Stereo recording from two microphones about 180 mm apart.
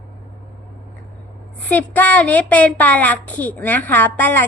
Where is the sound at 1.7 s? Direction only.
10° left (ahead or behind).